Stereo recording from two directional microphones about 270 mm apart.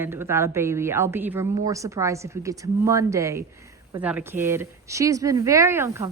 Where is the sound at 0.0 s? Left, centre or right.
Centre.